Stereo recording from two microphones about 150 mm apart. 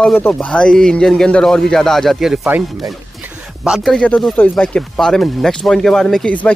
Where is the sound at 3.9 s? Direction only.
10° left (ahead or behind).